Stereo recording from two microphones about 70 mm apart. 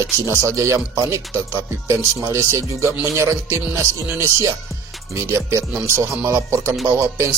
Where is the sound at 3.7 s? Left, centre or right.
Right.